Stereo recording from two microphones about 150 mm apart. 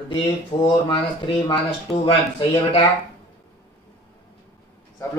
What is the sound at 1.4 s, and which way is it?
Speech, 35° left (ahead or behind).